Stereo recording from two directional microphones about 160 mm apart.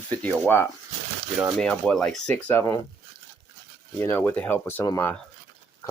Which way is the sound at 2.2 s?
15° left (ahead or behind).